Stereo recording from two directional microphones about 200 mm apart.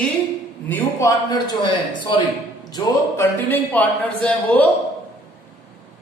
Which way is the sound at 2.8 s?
20° left (ahead or behind).